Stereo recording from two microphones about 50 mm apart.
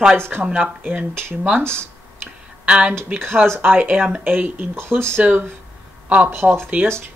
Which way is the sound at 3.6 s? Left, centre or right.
Right.